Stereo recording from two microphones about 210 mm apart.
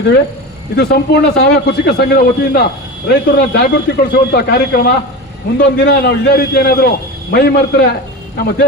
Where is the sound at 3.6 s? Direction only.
50° left (ahead or behind).